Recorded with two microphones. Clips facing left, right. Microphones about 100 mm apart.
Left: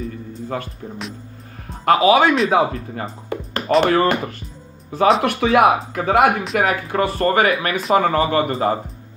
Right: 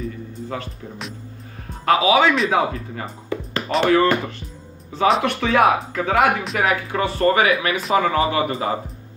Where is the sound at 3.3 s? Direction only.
50° left (ahead or behind).